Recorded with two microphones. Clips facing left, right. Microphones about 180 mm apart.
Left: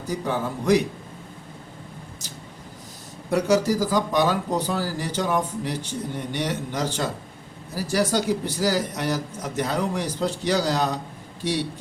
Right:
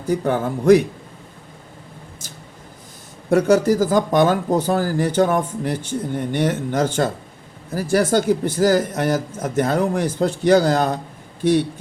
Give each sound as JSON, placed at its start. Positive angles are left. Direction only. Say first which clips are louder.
{"t": 0.1, "sound": "speech", "louder": "right 7 dB", "side_deg": -55}
{"t": 3.2, "sound": "speech", "louder": "right 5 dB", "side_deg": -50}